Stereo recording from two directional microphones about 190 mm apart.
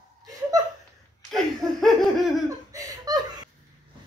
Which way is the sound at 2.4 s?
20° right (ahead or behind).